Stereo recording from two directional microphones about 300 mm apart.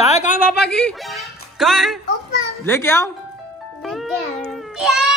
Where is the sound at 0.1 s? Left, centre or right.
Left.